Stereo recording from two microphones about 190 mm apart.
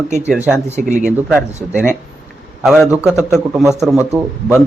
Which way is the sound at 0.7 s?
40° right (ahead or behind).